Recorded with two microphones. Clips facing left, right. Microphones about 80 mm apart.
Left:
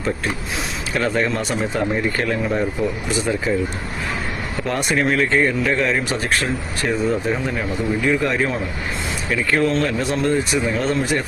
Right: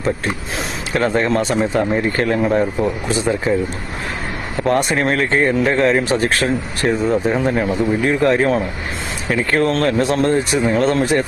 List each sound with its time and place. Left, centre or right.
0.9 s speech: right
4.6 s speech: right